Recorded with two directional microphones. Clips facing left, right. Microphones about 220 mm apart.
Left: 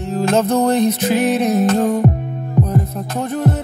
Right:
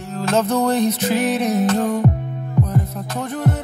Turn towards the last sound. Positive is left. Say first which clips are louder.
# left 3 dB
turn(degrees=25)  # may be behind; listen again after turning